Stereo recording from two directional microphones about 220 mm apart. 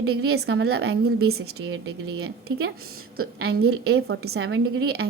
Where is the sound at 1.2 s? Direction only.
75° right (ahead or behind).